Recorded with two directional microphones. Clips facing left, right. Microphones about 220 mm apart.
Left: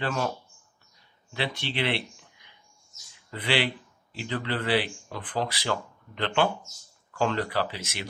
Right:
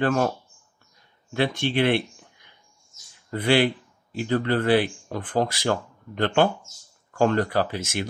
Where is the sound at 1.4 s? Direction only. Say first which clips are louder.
Right 8 dB; 50° right (ahead or behind).